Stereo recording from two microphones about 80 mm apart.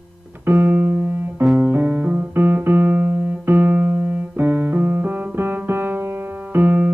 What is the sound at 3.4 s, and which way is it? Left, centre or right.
Keyboard, right.